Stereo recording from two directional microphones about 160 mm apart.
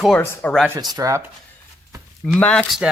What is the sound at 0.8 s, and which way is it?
Speech, 25° right (ahead or behind).